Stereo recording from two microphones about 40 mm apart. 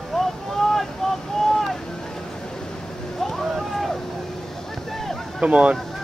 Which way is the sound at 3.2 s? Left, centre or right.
Centre.